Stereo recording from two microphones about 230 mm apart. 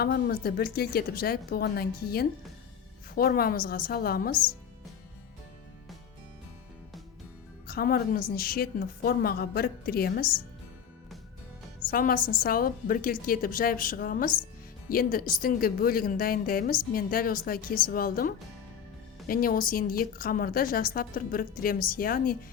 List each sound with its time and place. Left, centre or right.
0.0 s speech: left
7.7 s speech: left
11.9 s speech: left